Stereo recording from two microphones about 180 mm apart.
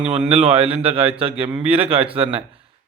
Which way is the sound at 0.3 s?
30° right (ahead or behind).